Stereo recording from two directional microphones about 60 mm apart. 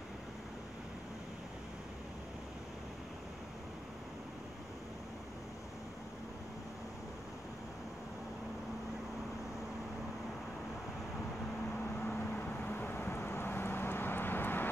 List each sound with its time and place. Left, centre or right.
12.1 s vehicle: left